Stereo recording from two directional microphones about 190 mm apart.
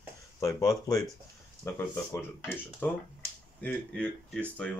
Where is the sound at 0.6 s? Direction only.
20° left (ahead or behind).